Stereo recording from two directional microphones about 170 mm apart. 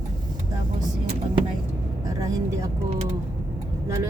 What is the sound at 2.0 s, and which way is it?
Speech, 20° right (ahead or behind).